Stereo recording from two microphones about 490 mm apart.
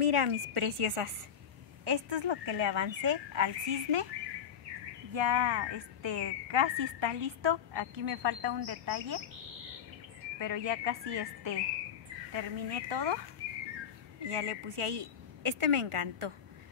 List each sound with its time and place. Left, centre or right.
0.0 s a woman's voice: right
1.9 s a woman's voice: right
5.1 s a woman's voice: right
10.4 s a woman's voice: right
14.3 s a woman's voice: right